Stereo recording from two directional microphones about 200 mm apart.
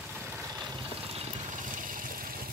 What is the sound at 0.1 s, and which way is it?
Vehicle, 10° right (ahead or behind).